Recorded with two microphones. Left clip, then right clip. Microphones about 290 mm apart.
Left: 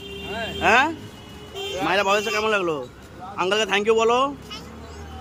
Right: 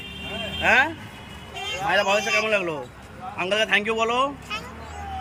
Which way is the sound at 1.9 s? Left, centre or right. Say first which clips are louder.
Even; centre.